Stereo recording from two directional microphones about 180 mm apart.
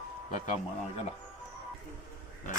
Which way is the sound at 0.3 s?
40° left (ahead or behind).